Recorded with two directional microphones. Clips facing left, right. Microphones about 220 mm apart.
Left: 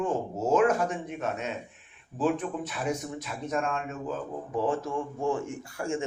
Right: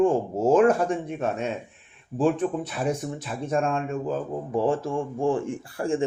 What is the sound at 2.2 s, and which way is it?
Speech, 30° right (ahead or behind).